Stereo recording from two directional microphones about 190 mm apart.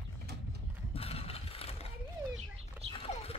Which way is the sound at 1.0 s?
30° left (ahead or behind).